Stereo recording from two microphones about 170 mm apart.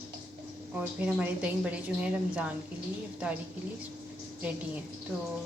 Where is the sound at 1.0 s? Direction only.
10° right (ahead or behind).